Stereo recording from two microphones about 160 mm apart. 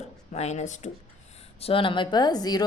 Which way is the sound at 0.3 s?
45° left (ahead or behind).